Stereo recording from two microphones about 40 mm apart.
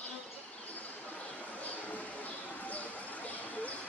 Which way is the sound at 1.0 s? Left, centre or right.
Left.